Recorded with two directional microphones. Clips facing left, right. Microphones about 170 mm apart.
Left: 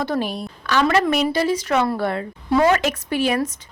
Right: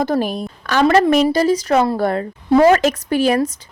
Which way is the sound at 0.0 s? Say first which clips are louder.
Right 5 dB; 45° right (ahead or behind).